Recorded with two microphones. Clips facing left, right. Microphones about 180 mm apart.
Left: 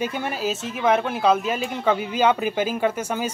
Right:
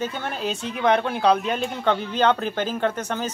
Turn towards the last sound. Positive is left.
turn(degrees=10)  # may be behind; listen again after turning